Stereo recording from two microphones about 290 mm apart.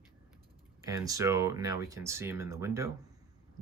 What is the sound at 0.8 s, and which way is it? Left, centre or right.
Speech, centre.